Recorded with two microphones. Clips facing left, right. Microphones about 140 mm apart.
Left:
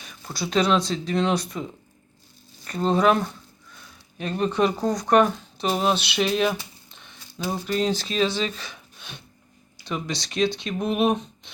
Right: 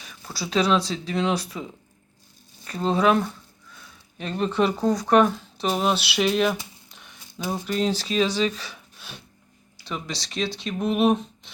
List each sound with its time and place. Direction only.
0.4 s speech: centre (ahead or behind)
2.6 s speech: centre (ahead or behind)
4.2 s speech: 5° left (ahead or behind)
8.6 s gasp: 5° right (ahead or behind)
9.8 s speech: centre (ahead or behind)